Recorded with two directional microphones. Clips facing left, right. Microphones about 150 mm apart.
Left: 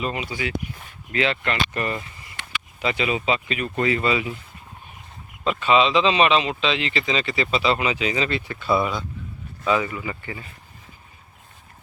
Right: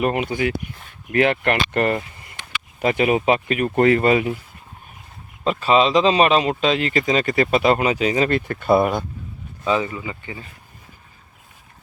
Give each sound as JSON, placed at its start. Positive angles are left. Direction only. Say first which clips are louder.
{"t": 0.0, "sound": "speech", "louder": "right 7 dB", "side_deg": -55}
{"t": 5.5, "sound": "speech", "louder": "right 2 dB", "side_deg": -40}
{"t": 9.6, "sound": "speech", "louder": "right 1 dB", "side_deg": -30}